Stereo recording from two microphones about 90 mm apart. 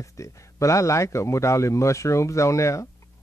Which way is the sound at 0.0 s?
35° left (ahead or behind).